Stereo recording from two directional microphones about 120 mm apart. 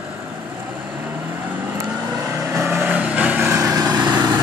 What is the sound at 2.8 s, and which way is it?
Vehicle, 10° right (ahead or behind).